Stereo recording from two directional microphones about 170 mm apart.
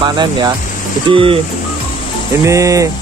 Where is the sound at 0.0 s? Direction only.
25° right (ahead or behind).